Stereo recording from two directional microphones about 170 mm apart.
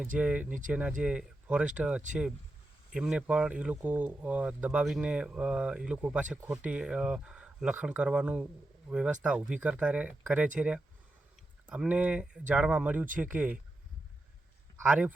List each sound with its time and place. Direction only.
0.2 s speech: 5° right (ahead or behind)
0.4 s speech: 50° right (ahead or behind)
0.7 s speech: 5° right (ahead or behind)
14.8 s speech: 10° right (ahead or behind)